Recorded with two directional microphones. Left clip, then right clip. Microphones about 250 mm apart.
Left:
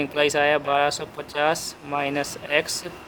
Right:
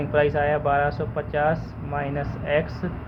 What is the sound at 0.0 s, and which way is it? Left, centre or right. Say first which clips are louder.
Speech: left 1 dB; left.